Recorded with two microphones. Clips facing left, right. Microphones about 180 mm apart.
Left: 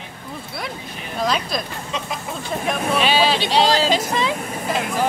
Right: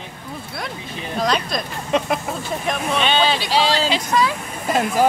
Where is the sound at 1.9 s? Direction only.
60° right (ahead or behind).